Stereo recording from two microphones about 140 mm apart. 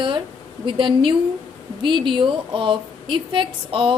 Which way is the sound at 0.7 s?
35° right (ahead or behind).